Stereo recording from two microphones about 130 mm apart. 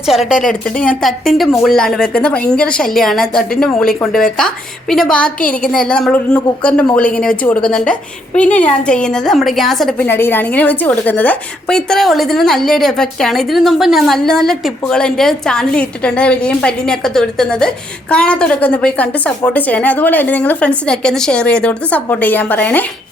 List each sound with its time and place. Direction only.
0.4 s a woman's voice: 10° left (ahead or behind)
5.4 s a woman's voice: 90° left
5.7 s a woman's voice: 5° left (ahead or behind)
10.0 s a woman's voice: 15° left (ahead or behind)